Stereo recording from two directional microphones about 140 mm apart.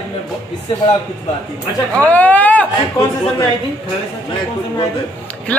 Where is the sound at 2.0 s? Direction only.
10° left (ahead or behind).